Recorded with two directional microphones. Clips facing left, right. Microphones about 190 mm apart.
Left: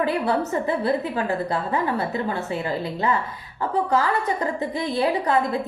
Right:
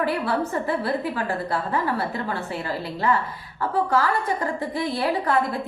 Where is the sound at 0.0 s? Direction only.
20° left (ahead or behind).